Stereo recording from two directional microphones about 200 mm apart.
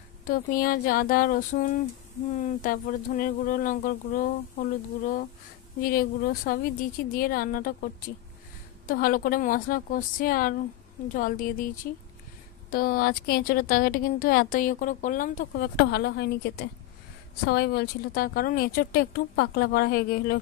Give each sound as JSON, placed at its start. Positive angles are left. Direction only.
{"t": 0.3, "sound": "speech", "side_deg": 45}